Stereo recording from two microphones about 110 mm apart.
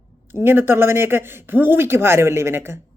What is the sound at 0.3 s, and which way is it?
Speech, 20° right (ahead or behind).